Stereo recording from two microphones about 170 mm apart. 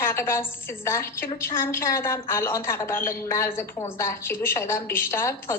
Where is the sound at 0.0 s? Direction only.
15° left (ahead or behind).